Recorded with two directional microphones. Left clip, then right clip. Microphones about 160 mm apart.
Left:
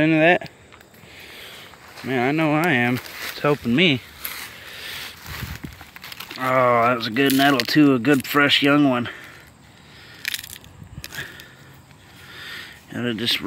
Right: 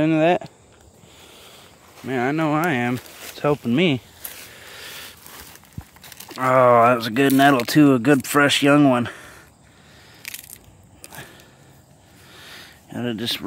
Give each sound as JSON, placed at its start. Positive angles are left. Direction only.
{"t": 0.0, "sound": "speech", "side_deg": -15}
{"t": 2.0, "sound": "speech", "side_deg": -10}
{"t": 4.6, "sound": "a sound", "side_deg": -25}
{"t": 6.3, "sound": "speech", "side_deg": -35}
{"t": 10.2, "sound": "crushing", "side_deg": -10}
{"t": 12.3, "sound": "a sound", "side_deg": -10}